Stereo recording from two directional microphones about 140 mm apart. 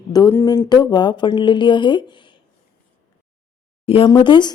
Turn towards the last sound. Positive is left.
turn(degrees=35)  # may be behind; listen again after turning